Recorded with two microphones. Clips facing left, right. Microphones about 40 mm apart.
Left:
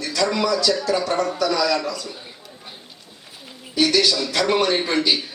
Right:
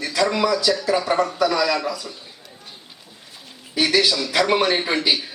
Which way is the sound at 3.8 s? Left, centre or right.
Centre.